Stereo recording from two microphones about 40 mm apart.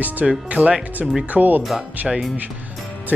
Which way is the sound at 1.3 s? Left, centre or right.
Right.